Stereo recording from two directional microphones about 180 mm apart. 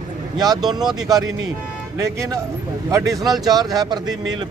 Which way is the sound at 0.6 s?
Centre (ahead or behind).